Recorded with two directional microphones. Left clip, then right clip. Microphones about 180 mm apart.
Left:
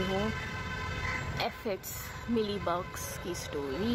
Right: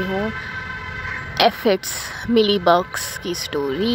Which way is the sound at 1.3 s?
30° right (ahead or behind).